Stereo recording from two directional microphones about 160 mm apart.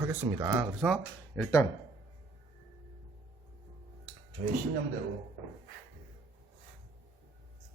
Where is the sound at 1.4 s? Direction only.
20° left (ahead or behind).